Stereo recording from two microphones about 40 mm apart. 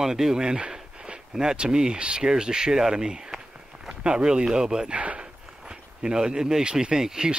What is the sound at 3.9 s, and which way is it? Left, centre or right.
Speech, right.